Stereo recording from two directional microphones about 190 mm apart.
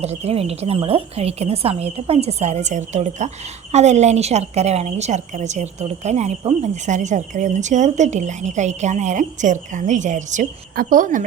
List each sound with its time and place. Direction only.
0.0 s a woman's voice: 35° right (ahead or behind)